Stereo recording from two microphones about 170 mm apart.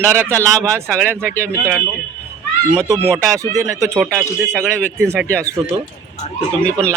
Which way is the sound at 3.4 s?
20° right (ahead or behind).